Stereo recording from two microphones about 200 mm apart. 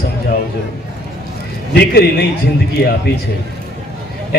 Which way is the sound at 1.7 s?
55° left (ahead or behind).